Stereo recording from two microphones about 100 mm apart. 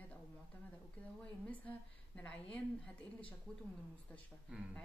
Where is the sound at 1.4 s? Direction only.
15° left (ahead or behind).